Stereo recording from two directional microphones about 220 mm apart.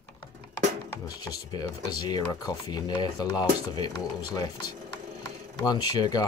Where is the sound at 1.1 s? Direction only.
15° left (ahead or behind).